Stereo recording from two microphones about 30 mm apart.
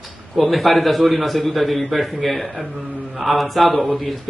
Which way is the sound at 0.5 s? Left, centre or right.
Centre.